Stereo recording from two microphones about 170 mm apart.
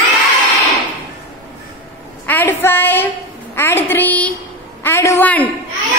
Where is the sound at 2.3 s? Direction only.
10° left (ahead or behind).